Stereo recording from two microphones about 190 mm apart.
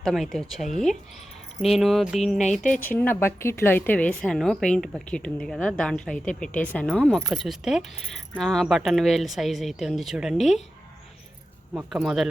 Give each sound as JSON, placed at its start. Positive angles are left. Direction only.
{"t": 0.0, "sound": "a woman's voice", "side_deg": 0}
{"t": 2.6, "sound": "speech", "side_deg": 45}
{"t": 2.9, "sound": "a woman's voice", "side_deg": 10}
{"t": 11.7, "sound": "a woman's voice", "side_deg": -5}